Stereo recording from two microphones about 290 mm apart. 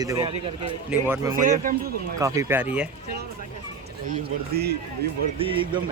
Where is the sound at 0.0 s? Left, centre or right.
Centre.